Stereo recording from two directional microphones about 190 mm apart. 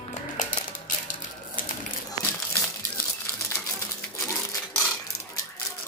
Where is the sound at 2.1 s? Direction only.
10° left (ahead or behind).